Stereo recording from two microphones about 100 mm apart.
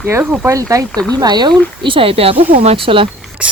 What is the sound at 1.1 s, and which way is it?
Speech, 45° right (ahead or behind).